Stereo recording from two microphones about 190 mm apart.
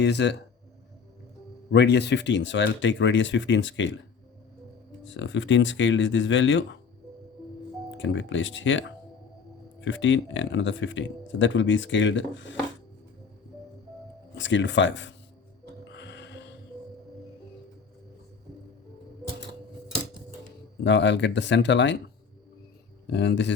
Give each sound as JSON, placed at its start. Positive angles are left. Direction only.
{"t": 0.0, "sound": "speech", "side_deg": 65}
{"t": 1.7, "sound": "speech", "side_deg": 65}
{"t": 5.0, "sound": "speech", "side_deg": 80}
{"t": 7.9, "sound": "speech", "side_deg": 75}
{"t": 9.8, "sound": "speech", "side_deg": 75}
{"t": 14.3, "sound": "speech", "side_deg": 75}
{"t": 16.0, "sound": "a sound", "side_deg": 65}
{"t": 20.8, "sound": "speech", "side_deg": 70}
{"t": 23.0, "sound": "speech", "side_deg": 65}